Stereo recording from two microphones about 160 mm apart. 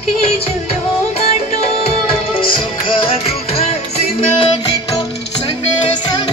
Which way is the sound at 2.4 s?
35° left (ahead or behind).